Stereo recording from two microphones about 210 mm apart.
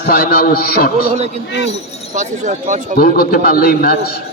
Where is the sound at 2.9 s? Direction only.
45° left (ahead or behind).